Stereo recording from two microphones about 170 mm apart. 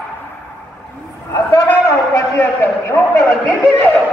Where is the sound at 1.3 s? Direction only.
20° left (ahead or behind).